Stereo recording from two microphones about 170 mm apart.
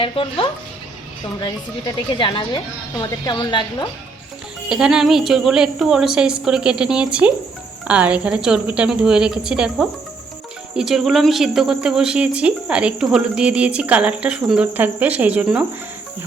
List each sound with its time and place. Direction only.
0.0 s speech: 30° left (ahead or behind)
4.7 s a woman's voice: 5° right (ahead or behind)